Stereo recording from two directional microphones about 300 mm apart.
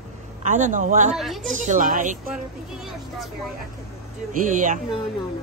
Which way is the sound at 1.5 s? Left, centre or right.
Right.